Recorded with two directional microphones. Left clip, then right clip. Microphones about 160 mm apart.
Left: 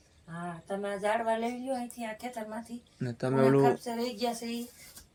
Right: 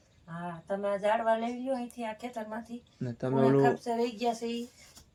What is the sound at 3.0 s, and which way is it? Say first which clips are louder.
Speech: left 1 dB; centre (ahead or behind).